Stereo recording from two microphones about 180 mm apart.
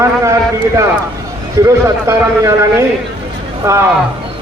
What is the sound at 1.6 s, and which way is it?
A man's voice, 15° right (ahead or behind).